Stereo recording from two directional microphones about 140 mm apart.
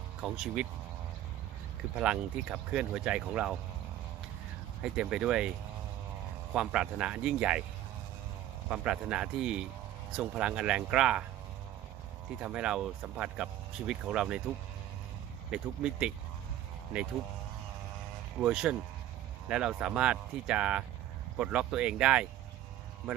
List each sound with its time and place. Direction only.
0.2 s speech: 5° right (ahead or behind)
2.0 s speech: 5° right (ahead or behind)
4.8 s speech: 5° right (ahead or behind)
6.5 s speech: 5° right (ahead or behind)
8.7 s speech: 10° right (ahead or behind)
12.4 s speech: 10° right (ahead or behind)
15.5 s speech: 5° right (ahead or behind)
18.3 s speech: 5° right (ahead or behind)